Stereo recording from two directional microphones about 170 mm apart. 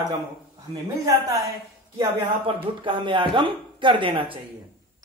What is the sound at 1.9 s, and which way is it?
Speech, 30° right (ahead or behind).